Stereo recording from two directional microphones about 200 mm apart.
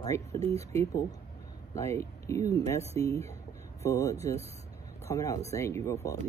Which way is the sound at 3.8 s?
15° left (ahead or behind).